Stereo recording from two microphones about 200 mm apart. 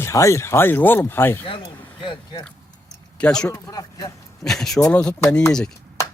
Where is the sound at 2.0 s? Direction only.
25° left (ahead or behind).